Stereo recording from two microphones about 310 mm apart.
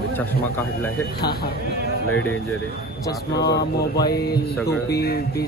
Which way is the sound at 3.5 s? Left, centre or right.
Left.